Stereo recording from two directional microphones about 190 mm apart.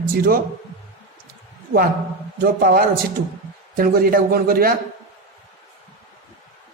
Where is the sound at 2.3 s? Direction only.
50° right (ahead or behind).